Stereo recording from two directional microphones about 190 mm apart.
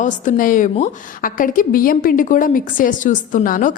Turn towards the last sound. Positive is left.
turn(degrees=45)  # may be behind; listen again after turning